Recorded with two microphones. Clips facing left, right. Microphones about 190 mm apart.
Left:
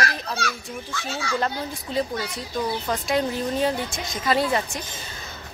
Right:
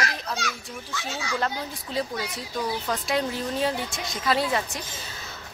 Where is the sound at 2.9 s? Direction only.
Centre (ahead or behind).